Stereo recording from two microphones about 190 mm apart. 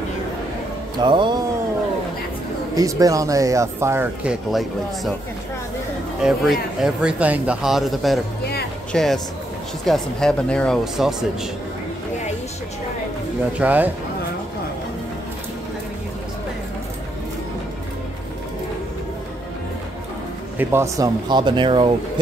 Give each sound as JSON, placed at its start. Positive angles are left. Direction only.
{"t": 0.9, "sound": "speech", "side_deg": -25}
{"t": 2.7, "sound": "speech", "side_deg": -20}
{"t": 6.2, "sound": "speech", "side_deg": 0}
{"t": 13.6, "sound": "speech", "side_deg": -10}
{"t": 20.5, "sound": "speech", "side_deg": -15}